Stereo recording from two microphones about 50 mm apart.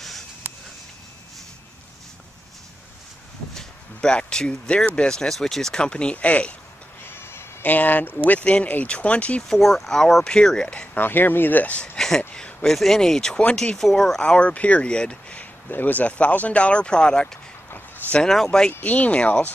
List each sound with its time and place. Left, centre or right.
3.5 s a sound: centre
5.0 s speech: centre
7.1 s bleat: left
7.6 s speech: left
8.2 s speech: left
9.5 s speech: centre
11.0 s speech: left
12.6 s speech: centre; by 15.4 s left
15.7 s speech: left; by 18.7 s centre
18.7 s speech: left